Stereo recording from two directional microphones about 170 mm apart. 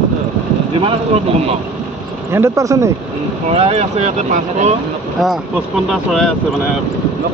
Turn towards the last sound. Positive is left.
turn(degrees=0)  # may be behind; listen again after turning